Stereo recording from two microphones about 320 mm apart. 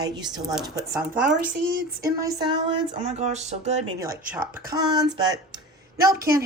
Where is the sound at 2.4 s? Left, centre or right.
Centre.